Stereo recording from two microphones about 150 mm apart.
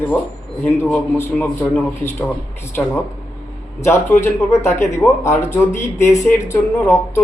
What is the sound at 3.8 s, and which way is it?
A man's voice, 15° left (ahead or behind).